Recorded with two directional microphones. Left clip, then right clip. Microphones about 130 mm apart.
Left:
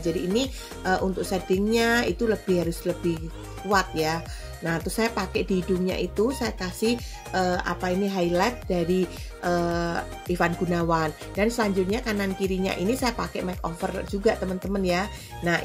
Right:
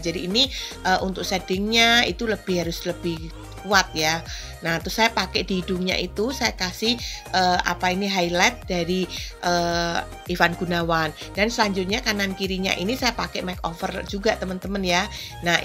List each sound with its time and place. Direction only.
0.1 s speech: 15° right (ahead or behind)